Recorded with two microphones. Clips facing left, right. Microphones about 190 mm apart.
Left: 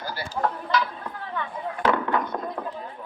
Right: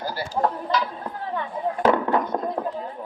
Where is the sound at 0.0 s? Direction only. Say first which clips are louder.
Right 3 dB; 35° right (ahead or behind).